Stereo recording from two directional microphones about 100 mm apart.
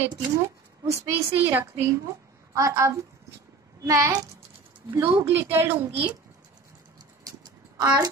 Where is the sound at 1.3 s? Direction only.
20° right (ahead or behind).